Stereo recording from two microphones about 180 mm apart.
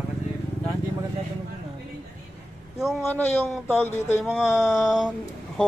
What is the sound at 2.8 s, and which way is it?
Speech, centre (ahead or behind).